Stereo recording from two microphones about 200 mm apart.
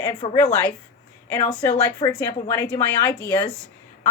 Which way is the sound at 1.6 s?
15° left (ahead or behind).